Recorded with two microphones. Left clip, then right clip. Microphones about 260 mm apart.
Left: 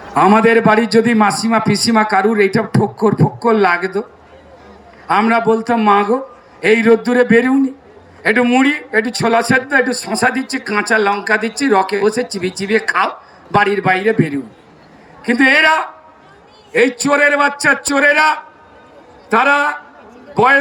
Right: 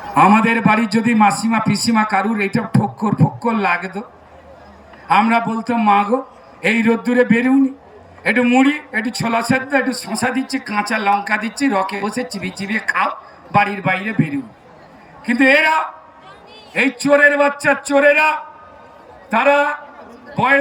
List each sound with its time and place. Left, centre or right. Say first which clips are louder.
0.1 s speech: left 2 dB; centre
5.0 s speech: left 2 dB; centre